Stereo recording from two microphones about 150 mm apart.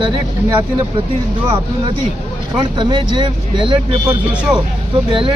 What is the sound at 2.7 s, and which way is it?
Speech, 30° right (ahead or behind).